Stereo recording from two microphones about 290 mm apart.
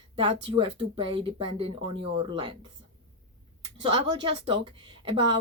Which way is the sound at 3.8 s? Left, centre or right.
Centre.